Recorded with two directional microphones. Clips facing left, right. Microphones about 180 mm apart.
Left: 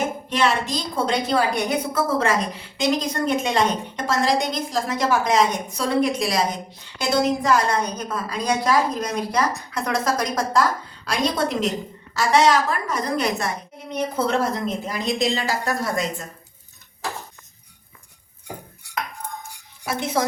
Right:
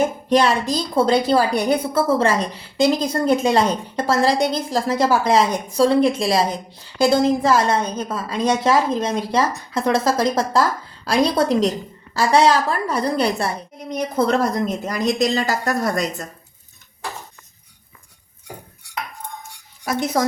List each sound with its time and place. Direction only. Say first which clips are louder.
0.3 s a woman's voice: right 5 dB; 35° right (ahead or behind)
19.8 s speech: right 3 dB; 40° right (ahead or behind)